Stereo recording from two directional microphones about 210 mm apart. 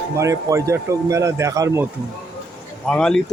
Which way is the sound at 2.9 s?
5° left (ahead or behind).